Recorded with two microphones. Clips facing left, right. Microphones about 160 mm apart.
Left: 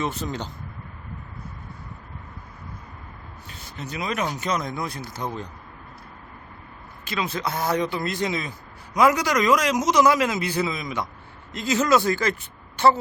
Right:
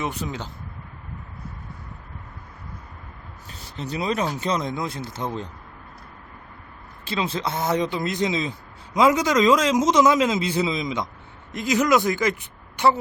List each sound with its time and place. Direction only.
0.0 s speech: 10° right (ahead or behind)
3.5 s speech: 35° right (ahead or behind)
7.0 s speech: 30° right (ahead or behind)